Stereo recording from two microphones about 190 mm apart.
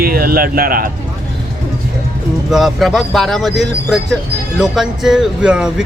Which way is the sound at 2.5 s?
Centre (ahead or behind).